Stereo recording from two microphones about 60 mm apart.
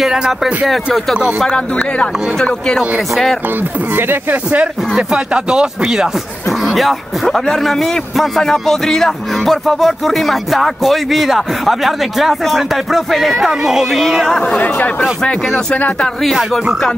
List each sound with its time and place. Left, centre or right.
0.0 s a man's voice: centre
2.3 s speech: centre
3.4 s speech: right
4.9 s a man's voice: centre
14.6 s speech: left